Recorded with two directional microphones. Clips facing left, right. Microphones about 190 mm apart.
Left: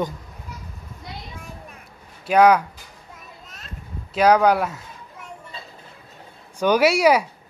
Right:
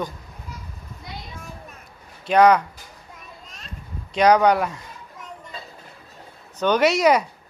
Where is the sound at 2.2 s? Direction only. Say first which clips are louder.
Even; 5° left (ahead or behind).